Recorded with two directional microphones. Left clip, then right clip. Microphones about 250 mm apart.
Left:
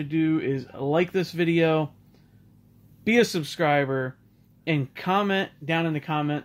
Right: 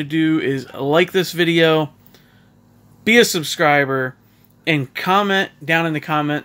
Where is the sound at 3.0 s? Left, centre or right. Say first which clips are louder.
Right 8 dB; centre.